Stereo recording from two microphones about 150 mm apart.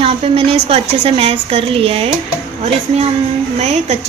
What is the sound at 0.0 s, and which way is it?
A woman's voice, 40° right (ahead or behind).